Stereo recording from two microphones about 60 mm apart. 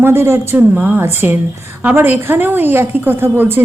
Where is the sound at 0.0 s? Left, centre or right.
Right.